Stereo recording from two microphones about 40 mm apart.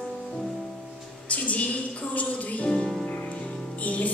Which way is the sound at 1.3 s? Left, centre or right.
Left.